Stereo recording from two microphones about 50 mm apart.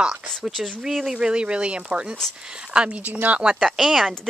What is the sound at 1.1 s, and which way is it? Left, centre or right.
Speech, centre.